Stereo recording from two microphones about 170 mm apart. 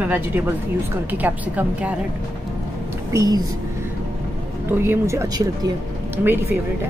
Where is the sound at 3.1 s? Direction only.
20° right (ahead or behind).